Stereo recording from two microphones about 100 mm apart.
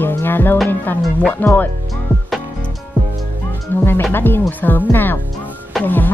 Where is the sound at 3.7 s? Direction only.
20° left (ahead or behind).